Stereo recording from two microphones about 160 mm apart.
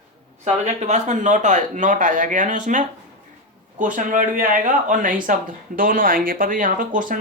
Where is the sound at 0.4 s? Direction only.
45° right (ahead or behind).